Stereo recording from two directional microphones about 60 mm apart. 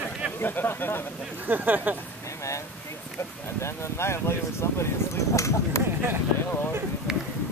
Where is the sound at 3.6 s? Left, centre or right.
Left.